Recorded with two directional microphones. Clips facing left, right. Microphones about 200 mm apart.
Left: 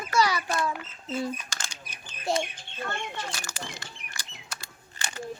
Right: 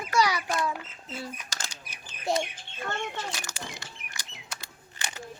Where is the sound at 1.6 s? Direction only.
35° right (ahead or behind).